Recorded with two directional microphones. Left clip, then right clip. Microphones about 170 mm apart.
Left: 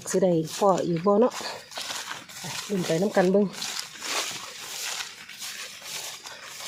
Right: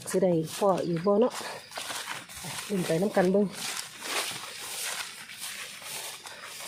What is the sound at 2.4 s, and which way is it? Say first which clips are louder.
Speech: left 3 dB; 25° left (ahead or behind).